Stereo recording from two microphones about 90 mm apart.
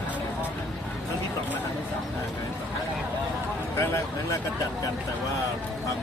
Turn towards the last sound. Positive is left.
turn(degrees=30)  # may be behind; listen again after turning